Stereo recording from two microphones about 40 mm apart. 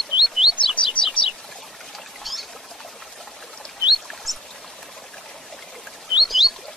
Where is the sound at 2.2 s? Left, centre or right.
Centre.